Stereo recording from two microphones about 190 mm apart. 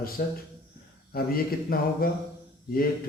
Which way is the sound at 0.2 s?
50° left (ahead or behind).